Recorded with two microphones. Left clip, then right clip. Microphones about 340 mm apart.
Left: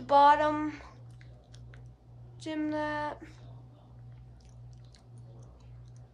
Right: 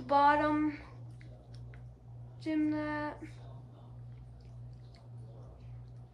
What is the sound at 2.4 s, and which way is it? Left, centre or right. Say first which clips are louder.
Speech: even; centre.